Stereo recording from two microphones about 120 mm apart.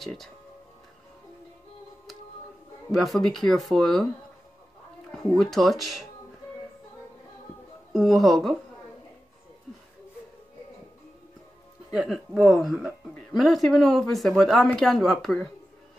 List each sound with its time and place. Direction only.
0.0 s speech: centre (ahead or behind)
2.9 s speech: centre (ahead or behind)
5.1 s speech: centre (ahead or behind)
7.9 s speech: centre (ahead or behind)
11.9 s speech: centre (ahead or behind)